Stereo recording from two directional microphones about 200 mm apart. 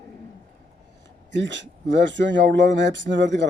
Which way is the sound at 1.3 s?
65° right (ahead or behind).